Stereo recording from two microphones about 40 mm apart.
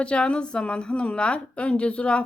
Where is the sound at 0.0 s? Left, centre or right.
Left.